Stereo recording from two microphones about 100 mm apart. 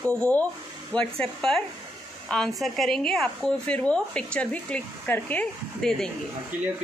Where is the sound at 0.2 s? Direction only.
15° left (ahead or behind).